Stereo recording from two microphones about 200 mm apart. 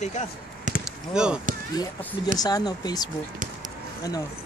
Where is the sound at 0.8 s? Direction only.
5° right (ahead or behind).